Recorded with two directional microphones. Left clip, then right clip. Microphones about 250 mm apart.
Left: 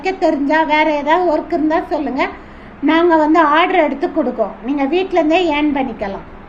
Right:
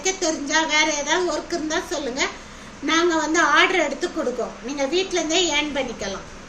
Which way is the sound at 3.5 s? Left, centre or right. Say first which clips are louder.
Left 5 dB; centre.